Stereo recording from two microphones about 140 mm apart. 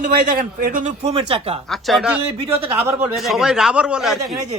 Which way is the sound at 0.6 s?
70° right (ahead or behind).